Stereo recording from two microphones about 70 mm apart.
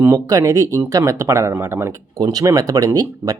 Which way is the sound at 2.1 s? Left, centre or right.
Right.